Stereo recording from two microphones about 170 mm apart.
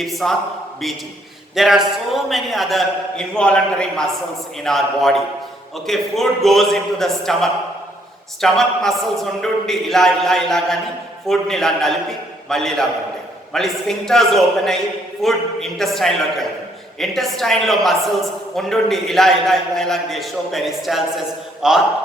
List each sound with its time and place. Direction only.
0.0 s a man's voice: centre (ahead or behind)
1.5 s a man's voice: centre (ahead or behind)